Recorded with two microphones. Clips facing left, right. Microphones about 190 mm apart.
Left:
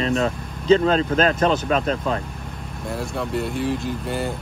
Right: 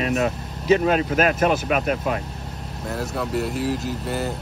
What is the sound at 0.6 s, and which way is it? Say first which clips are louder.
Speech: left 2 dB; 15° right (ahead or behind).